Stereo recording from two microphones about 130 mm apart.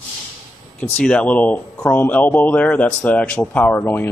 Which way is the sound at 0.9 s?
10° left (ahead or behind).